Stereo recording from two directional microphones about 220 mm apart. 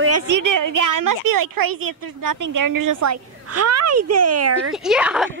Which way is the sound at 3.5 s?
90° right.